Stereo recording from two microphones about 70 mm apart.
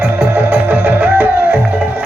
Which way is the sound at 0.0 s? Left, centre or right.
Centre.